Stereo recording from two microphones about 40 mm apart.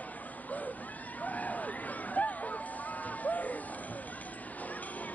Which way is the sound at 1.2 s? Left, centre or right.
Left.